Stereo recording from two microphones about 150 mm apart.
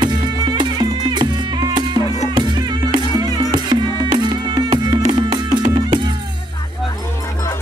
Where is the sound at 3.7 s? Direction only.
30° right (ahead or behind).